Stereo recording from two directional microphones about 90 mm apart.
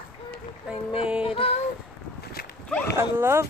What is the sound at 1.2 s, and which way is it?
Child singing, 90° left.